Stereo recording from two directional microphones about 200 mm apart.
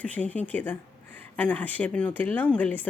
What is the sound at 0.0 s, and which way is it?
Speech, 5° left (ahead or behind).